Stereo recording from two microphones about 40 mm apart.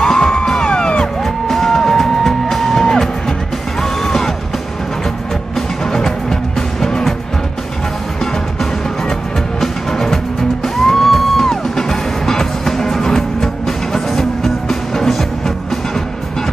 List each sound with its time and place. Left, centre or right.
0.0 s music: centre
1.2 s music: centre
5.9 s music: centre
9.6 s music: centre